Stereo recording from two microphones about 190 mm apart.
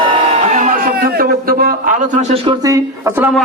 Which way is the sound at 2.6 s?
15° right (ahead or behind).